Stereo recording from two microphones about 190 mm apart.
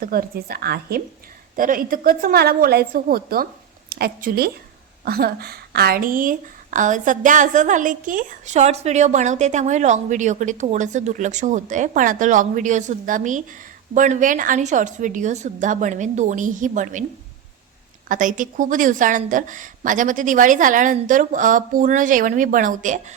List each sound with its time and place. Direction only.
0.0 s a woman's voice: 50° right (ahead or behind)
18.1 s speech: 45° right (ahead or behind)